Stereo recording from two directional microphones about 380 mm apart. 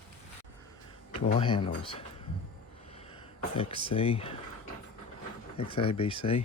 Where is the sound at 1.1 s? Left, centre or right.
Centre.